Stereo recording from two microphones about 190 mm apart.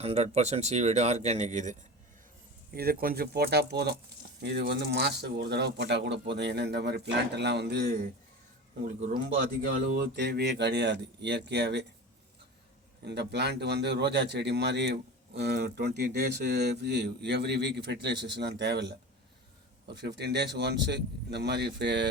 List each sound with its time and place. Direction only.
0.0 s speech: 35° right (ahead or behind)
2.7 s a man's voice: 50° right (ahead or behind)
9.9 s speech: 60° right (ahead or behind)
13.1 s speech: 60° right (ahead or behind)
19.9 s speech: 60° right (ahead or behind)